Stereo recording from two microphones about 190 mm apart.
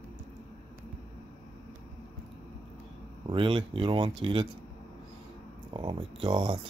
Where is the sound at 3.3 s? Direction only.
25° right (ahead or behind).